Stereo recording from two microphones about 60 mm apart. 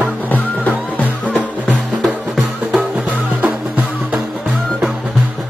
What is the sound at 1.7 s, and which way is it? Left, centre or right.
Music, centre.